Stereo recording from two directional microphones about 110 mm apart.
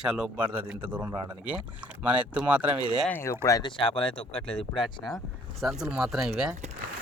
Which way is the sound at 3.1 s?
20° left (ahead or behind).